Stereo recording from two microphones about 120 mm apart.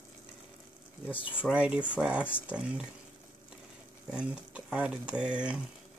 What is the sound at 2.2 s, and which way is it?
Speech, 15° left (ahead or behind).